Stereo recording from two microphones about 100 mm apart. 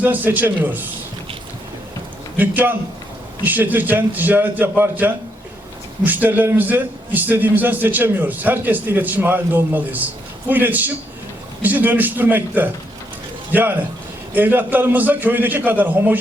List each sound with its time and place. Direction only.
0.0 s a man's voice: 20° right (ahead or behind)
2.4 s a man's voice: 20° right (ahead or behind)